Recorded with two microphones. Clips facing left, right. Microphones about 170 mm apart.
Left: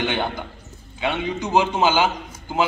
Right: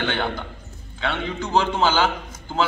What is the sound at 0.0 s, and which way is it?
A man's voice, 15° left (ahead or behind).